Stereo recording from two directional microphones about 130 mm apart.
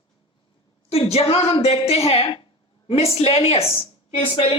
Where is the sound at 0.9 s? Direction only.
55° left (ahead or behind).